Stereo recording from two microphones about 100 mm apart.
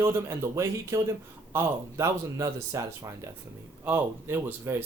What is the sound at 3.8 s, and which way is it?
Speech, 20° right (ahead or behind).